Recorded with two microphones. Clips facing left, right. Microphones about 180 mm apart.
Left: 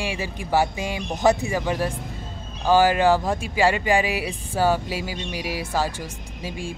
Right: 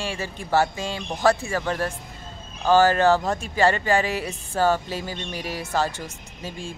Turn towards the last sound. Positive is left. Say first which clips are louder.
# left 3 dB
turn(degrees=10)  # may be behind; listen again after turning